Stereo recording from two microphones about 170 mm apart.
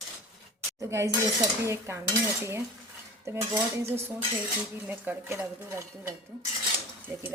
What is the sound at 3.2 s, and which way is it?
A woman's voice, 15° right (ahead or behind).